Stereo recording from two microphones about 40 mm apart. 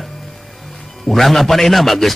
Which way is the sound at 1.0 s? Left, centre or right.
Centre.